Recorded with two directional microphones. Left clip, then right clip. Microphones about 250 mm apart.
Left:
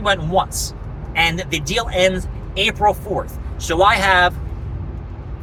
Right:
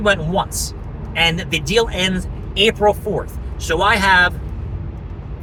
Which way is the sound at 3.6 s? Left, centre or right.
Centre.